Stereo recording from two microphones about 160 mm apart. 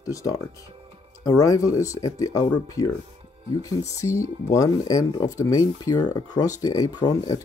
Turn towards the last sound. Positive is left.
turn(degrees=25)  # may be behind; listen again after turning